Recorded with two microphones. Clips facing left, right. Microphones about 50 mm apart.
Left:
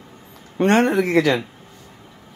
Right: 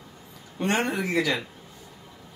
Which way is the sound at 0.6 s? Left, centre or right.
Left.